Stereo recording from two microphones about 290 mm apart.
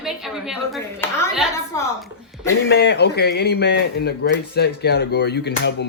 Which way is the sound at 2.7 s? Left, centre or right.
Left.